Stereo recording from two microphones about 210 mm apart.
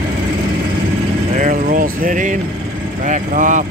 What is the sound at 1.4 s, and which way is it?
Vehicle, 40° right (ahead or behind).